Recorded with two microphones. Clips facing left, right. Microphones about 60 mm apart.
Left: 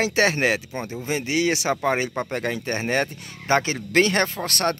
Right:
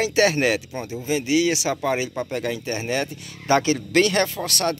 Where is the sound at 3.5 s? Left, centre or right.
Left.